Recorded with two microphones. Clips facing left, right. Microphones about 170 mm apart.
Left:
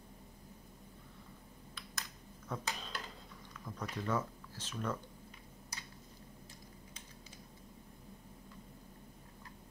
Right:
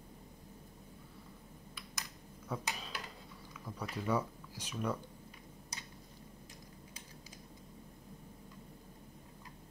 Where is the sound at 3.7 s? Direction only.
5° right (ahead or behind).